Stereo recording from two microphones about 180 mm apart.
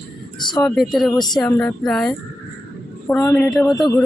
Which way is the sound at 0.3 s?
25° left (ahead or behind).